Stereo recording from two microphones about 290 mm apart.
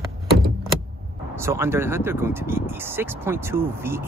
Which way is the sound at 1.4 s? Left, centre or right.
Centre.